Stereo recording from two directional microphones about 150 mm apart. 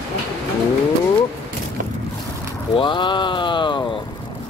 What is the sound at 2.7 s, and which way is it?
Speech, 30° left (ahead or behind).